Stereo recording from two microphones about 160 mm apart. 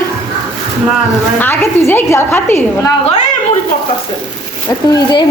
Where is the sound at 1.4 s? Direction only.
15° left (ahead or behind).